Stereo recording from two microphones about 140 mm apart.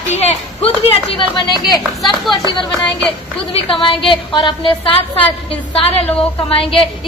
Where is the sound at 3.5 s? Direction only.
40° left (ahead or behind).